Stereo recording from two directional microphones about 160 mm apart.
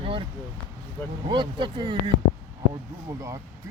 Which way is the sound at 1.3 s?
30° right (ahead or behind).